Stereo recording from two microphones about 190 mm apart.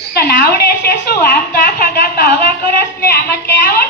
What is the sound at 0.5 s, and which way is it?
A woman's voice, 55° left (ahead or behind).